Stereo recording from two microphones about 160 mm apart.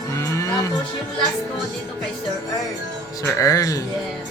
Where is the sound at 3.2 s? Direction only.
20° left (ahead or behind).